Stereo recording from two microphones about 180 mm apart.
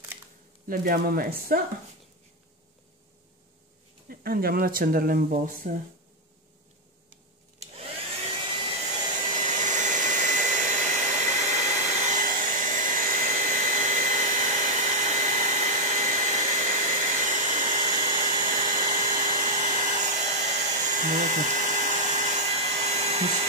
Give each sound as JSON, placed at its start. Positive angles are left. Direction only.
{"t": 0.7, "sound": "speech", "side_deg": -55}
{"t": 4.1, "sound": "speech", "side_deg": -55}
{"t": 7.5, "sound": "vacuum cleaner", "side_deg": -35}
{"t": 9.4, "sound": "hair dryer", "side_deg": -45}